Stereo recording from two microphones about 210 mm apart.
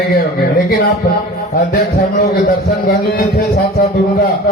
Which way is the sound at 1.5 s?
45° left (ahead or behind).